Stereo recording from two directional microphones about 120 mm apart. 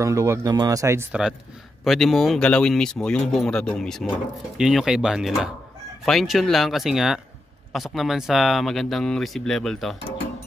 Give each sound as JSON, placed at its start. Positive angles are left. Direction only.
{"t": 0.0, "sound": "speech", "side_deg": -25}
{"t": 1.9, "sound": "speech", "side_deg": 0}